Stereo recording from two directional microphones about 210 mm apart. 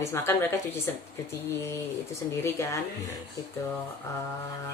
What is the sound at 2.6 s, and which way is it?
Speech, 15° left (ahead or behind).